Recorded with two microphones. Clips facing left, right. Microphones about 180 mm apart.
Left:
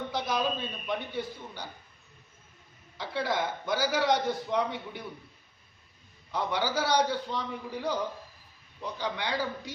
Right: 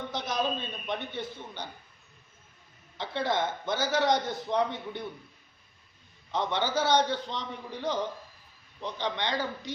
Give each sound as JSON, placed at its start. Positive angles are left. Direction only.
{"t": 0.1, "sound": "a sound", "side_deg": 10}
{"t": 0.9, "sound": "a man's voice", "side_deg": 10}
{"t": 3.0, "sound": "a man's voice", "side_deg": 10}
{"t": 6.3, "sound": "a man's voice", "side_deg": 10}